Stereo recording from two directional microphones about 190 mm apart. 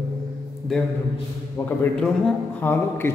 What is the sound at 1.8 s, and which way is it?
A man's voice, 5° left (ahead or behind).